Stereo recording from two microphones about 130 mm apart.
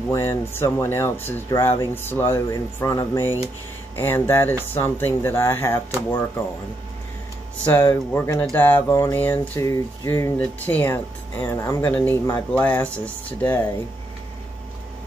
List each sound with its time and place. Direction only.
0.1 s speech: 20° left (ahead or behind)
7.7 s speech: 20° left (ahead or behind)
8.9 s speech: 25° left (ahead or behind)
9.2 s speech: 15° left (ahead or behind)